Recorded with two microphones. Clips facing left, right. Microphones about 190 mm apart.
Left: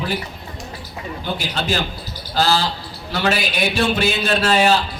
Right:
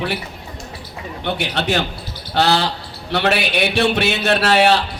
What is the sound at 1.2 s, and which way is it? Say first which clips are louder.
A man's voice: right 4 dB; 70° right (ahead or behind).